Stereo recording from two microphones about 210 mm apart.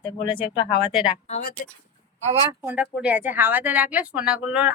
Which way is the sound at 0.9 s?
5° right (ahead or behind).